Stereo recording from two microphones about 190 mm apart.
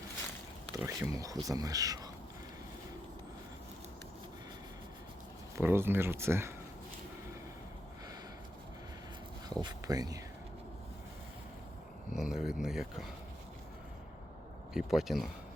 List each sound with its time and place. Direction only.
0.9 s speech: 15° right (ahead or behind)
5.5 s speech: 10° right (ahead or behind)
9.6 s speech: 20° right (ahead or behind)
12.1 s speech: 5° right (ahead or behind)
14.7 s speech: centre (ahead or behind)